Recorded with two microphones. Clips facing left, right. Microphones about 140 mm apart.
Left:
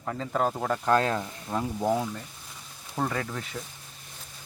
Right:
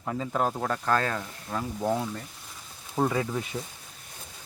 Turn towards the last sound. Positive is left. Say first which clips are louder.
# right 4 dB
turn(degrees=-15)  # may be behind; listen again after turning